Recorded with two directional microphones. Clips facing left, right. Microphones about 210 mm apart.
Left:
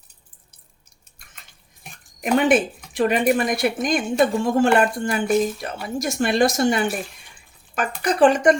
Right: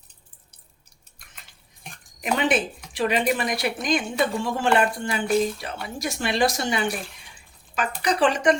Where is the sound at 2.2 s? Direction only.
50° left (ahead or behind).